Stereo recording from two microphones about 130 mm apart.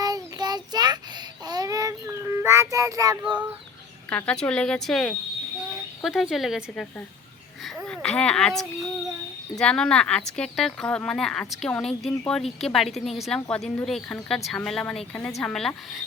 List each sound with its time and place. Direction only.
0.0 s child singing: 30° right (ahead or behind)
4.1 s speech: 10° left (ahead or behind)
7.9 s speech: 5° left (ahead or behind)